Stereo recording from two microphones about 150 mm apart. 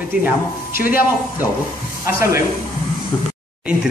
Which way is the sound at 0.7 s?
70° left (ahead or behind).